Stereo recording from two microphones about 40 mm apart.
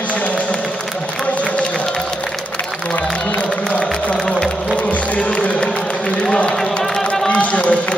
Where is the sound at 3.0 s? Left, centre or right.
Left.